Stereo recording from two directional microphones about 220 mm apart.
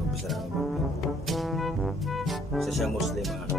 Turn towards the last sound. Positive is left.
turn(degrees=0)  # may be behind; listen again after turning